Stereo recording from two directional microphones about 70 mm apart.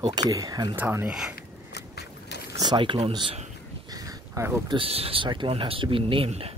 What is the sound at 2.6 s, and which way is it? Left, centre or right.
Speech, right.